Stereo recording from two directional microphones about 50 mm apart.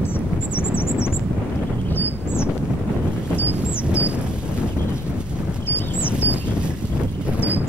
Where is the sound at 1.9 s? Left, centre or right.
Left.